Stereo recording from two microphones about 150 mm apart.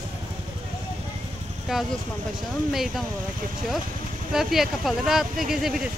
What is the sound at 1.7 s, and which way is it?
Speech, 5° right (ahead or behind).